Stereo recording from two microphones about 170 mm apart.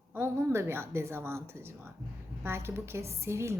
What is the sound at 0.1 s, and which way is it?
A woman's voice, 15° right (ahead or behind).